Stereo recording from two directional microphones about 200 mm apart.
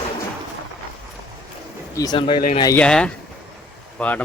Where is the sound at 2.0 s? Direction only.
20° left (ahead or behind).